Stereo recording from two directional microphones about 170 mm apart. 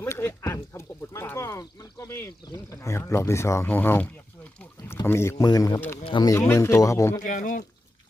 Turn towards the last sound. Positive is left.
turn(degrees=50)  # may be behind; listen again after turning